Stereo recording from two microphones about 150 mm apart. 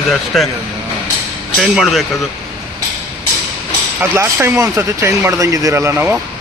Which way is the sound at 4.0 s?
15° right (ahead or behind).